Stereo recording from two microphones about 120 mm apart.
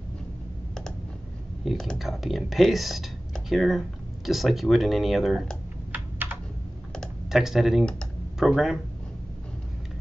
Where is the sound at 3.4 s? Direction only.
Centre (ahead or behind).